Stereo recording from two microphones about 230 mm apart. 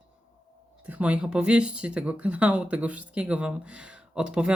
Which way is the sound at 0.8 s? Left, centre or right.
Centre.